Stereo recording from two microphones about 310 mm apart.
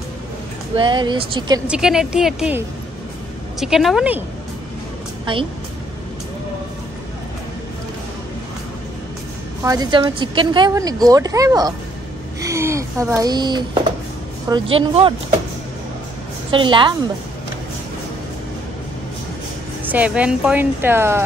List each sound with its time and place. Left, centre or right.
0.7 s speech: centre
1.7 s speech: centre
5.2 s a woman's voice: centre
9.6 s speech: centre
16.4 s speech: centre
19.8 s speech: centre